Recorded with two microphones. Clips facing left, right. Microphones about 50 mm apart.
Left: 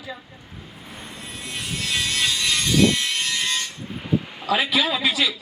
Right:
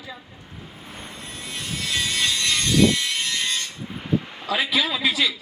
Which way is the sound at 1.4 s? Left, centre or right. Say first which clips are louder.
Left 1 dB; centre.